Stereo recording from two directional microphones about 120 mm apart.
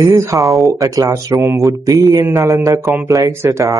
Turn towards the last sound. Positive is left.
turn(degrees=-20)  # may be behind; listen again after turning